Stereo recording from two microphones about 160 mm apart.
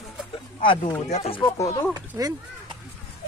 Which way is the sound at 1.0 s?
40° left (ahead or behind).